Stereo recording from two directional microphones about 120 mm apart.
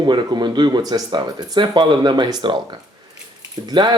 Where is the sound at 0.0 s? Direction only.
40° right (ahead or behind).